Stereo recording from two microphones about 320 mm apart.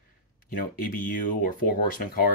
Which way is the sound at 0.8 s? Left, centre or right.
Left.